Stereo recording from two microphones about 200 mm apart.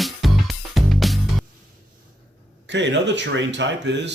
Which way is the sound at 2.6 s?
60° right (ahead or behind).